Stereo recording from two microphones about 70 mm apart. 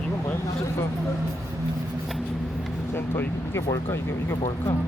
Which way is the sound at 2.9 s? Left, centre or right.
Left.